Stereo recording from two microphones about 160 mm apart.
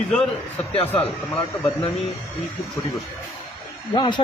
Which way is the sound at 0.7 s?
35° left (ahead or behind).